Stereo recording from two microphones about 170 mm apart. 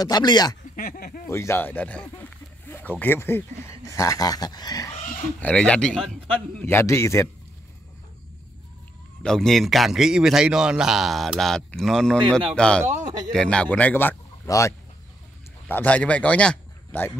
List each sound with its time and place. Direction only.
0.0 s speech: 25° left (ahead or behind)
0.7 s speech: 60° left (ahead or behind)
1.3 s speech: 15° left (ahead or behind)
5.4 s a man's voice: 5° left (ahead or behind)
9.2 s a man's voice: 5° left (ahead or behind)
12.8 s a man's voice: 20° right (ahead or behind)
13.3 s a man's voice: 5° left (ahead or behind)
15.7 s a man's voice: 10° left (ahead or behind)